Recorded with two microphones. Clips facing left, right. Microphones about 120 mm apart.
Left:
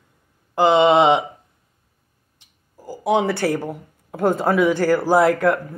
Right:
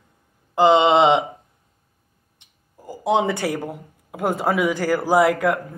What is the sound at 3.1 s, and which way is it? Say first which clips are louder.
A woman's voice: left 2 dB; 20° right (ahead or behind).